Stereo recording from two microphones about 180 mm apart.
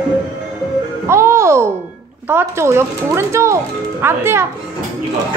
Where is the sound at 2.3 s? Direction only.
15° right (ahead or behind).